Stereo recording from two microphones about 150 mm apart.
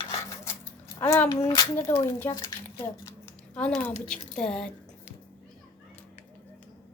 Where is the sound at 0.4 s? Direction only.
20° left (ahead or behind).